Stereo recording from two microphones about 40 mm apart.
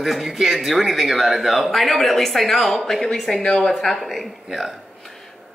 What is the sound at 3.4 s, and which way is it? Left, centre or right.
Speech, left.